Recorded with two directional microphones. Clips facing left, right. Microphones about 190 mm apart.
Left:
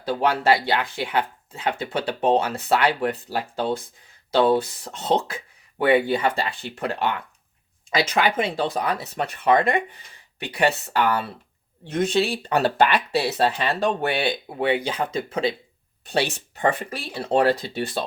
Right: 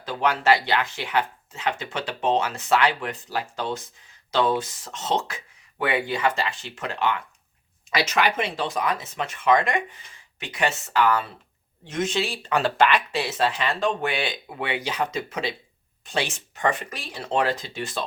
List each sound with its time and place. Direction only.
0.1 s speech: 30° left (ahead or behind)